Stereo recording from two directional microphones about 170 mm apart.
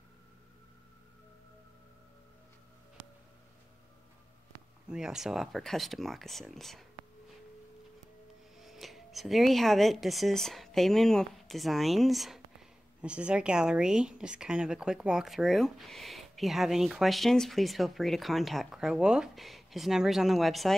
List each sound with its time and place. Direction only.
4.8 s speech: 5° right (ahead or behind)
8.5 s speech: centre (ahead or behind)